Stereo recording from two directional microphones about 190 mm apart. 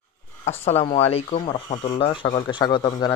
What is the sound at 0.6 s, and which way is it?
A man's voice, 30° left (ahead or behind).